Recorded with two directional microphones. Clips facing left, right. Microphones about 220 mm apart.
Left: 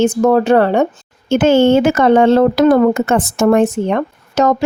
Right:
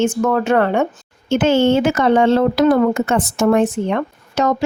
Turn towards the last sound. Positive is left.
turn(degrees=45)  # may be behind; listen again after turning